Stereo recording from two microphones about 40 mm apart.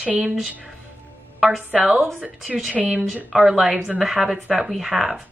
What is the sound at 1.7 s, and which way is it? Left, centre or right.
Speech, centre.